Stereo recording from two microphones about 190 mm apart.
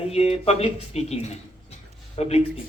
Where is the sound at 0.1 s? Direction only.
30° left (ahead or behind).